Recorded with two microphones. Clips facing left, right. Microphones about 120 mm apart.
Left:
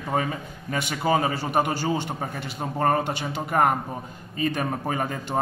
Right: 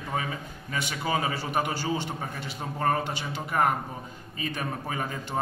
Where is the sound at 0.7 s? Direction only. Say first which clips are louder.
Left 6 dB; 45° left (ahead or behind).